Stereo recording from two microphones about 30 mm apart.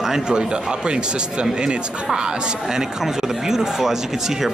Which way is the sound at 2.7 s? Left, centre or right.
Centre.